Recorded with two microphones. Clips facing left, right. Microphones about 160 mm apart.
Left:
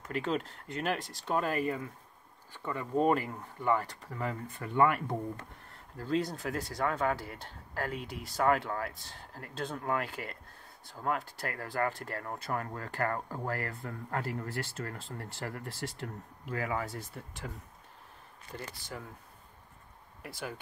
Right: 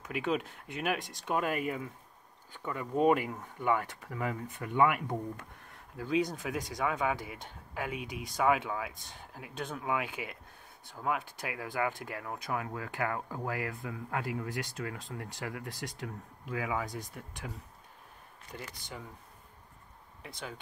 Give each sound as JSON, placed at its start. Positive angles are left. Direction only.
{"t": 0.0, "sound": "speech", "side_deg": -10}
{"t": 15.7, "sound": "speech", "side_deg": -15}
{"t": 16.4, "sound": "speech", "side_deg": 0}
{"t": 20.2, "sound": "speech", "side_deg": 5}